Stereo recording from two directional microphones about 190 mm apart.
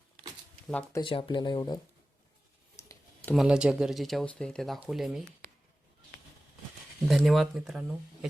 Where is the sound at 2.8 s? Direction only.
15° left (ahead or behind).